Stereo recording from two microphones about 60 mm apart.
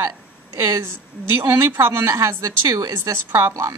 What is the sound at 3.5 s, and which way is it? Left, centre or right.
Speech, right.